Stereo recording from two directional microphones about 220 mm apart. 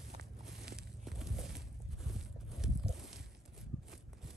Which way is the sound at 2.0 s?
Centre (ahead or behind).